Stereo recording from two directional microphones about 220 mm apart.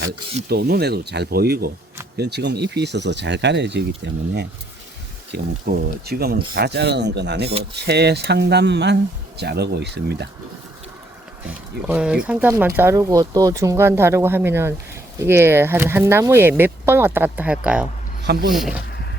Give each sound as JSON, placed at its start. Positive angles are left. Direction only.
{"t": 0.4, "sound": "speech", "side_deg": -45}
{"t": 11.4, "sound": "speech", "side_deg": -5}
{"t": 18.2, "sound": "speech", "side_deg": -45}
{"t": 18.5, "sound": "speech", "side_deg": 0}